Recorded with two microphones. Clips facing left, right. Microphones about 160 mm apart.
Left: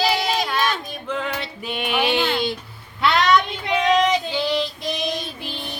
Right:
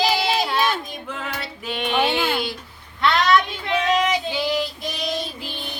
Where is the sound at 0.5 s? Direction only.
10° right (ahead or behind); by 2.2 s 10° left (ahead or behind).